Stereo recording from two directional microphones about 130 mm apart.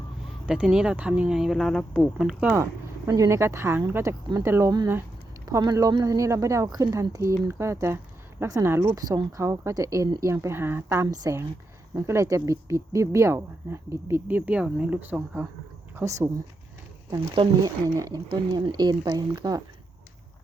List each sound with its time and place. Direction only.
0.4 s speech: 5° right (ahead or behind)
2.4 s speech: 15° right (ahead or behind)
16.0 s speech: 25° right (ahead or behind)
17.2 s speech: 40° right (ahead or behind)
17.9 s speech: 30° right (ahead or behind)